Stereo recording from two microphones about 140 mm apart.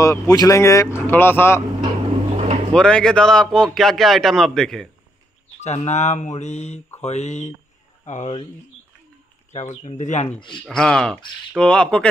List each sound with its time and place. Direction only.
0.0 s speech: 25° left (ahead or behind)
2.3 s vehicle: 55° right (ahead or behind)
2.7 s a man's voice: 5° left (ahead or behind)
5.6 s mantra: 55° left (ahead or behind)
9.5 s speech: 55° left (ahead or behind)
10.7 s a man's voice: 5° left (ahead or behind)